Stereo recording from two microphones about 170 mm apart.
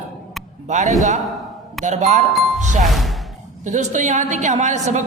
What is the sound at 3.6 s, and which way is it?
A man's voice, 45° right (ahead or behind).